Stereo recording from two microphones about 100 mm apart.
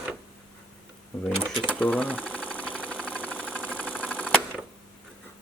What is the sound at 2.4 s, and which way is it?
Engine, 15° left (ahead or behind).